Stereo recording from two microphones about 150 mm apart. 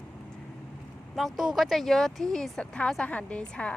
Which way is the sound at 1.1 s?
Centre (ahead or behind).